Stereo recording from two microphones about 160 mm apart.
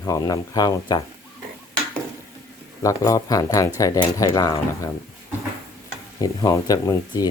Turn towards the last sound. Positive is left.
turn(degrees=25)  # may be behind; listen again after turning